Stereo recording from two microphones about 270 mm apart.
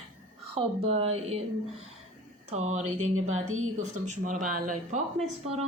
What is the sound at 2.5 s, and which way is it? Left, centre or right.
Speech, right.